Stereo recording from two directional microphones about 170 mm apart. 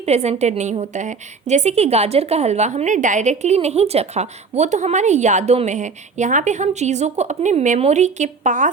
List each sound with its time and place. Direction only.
0.0 s a woman's voice: 40° right (ahead or behind)